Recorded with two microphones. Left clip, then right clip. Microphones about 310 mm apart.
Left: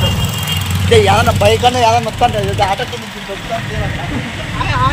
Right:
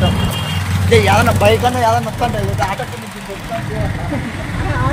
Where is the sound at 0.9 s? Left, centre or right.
Centre.